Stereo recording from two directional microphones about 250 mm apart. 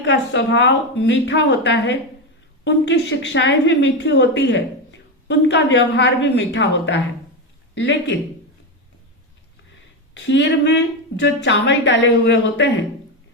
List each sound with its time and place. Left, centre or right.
0.0 s a woman's voice: left
10.2 s a woman's voice: left